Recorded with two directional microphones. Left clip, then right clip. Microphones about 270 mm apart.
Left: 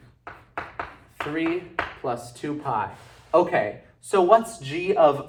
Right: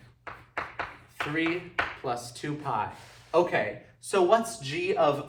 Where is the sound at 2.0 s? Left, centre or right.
Centre.